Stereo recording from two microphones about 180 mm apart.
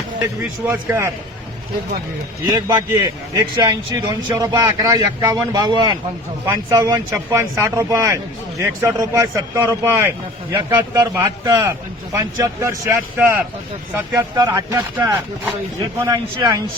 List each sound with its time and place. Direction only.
0.6 s speech: 15° right (ahead or behind)
2.5 s a man's voice: 25° right (ahead or behind)
16.0 s a man's voice: 20° right (ahead or behind)